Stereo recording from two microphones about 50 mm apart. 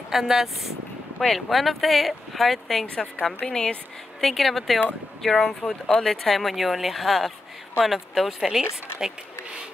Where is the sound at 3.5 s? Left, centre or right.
Centre.